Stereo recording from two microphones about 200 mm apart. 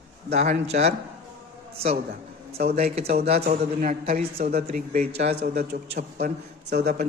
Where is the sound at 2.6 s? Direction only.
55° right (ahead or behind).